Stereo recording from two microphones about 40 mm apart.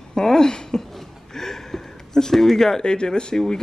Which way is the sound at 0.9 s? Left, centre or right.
Centre.